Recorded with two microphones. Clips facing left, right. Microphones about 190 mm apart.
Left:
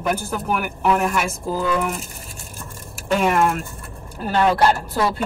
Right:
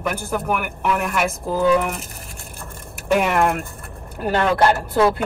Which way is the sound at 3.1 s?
60° right (ahead or behind).